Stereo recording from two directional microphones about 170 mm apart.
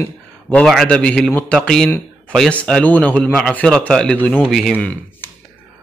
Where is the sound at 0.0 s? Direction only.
10° left (ahead or behind).